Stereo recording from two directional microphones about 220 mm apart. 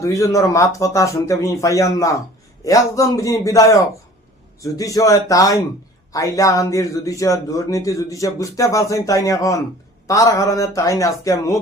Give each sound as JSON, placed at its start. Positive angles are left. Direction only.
{"t": 0.0, "sound": "a man's voice", "side_deg": 15}